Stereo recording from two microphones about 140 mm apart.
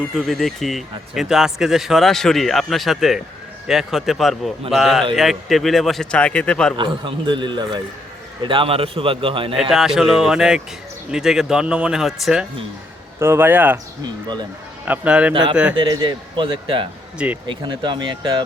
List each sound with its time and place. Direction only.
0.2 s speech: centre (ahead or behind)
6.7 s a man's voice: 35° right (ahead or behind)
9.6 s speech: centre (ahead or behind)
13.1 s speech: 15° right (ahead or behind)
14.0 s a man's voice: 30° right (ahead or behind)
14.8 s speech: 10° right (ahead or behind)
15.8 s a man's voice: 35° right (ahead or behind)